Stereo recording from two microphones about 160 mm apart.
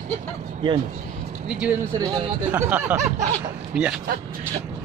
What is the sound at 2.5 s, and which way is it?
Speech, 10° right (ahead or behind).